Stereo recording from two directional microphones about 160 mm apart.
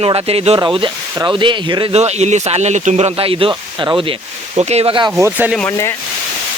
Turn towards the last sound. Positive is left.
turn(degrees=15)  # may be behind; listen again after turning